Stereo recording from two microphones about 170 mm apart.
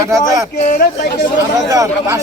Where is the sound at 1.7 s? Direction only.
20° right (ahead or behind).